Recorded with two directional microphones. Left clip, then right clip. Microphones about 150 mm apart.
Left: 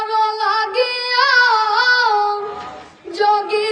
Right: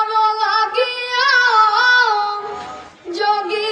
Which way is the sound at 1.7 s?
25° left (ahead or behind).